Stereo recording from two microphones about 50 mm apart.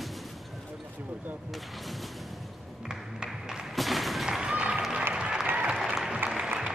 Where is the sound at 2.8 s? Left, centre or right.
Centre.